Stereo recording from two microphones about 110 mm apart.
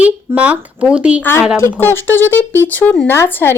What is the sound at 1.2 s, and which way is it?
Speech, 20° left (ahead or behind).